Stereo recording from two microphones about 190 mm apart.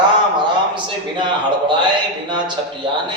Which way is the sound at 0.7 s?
25° right (ahead or behind).